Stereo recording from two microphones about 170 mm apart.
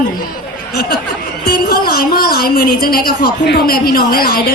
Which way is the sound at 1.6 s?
65° left (ahead or behind).